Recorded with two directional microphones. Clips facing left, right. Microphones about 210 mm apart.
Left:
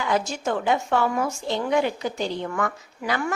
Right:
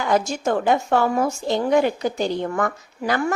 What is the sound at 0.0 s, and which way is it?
A woman's voice, 45° right (ahead or behind).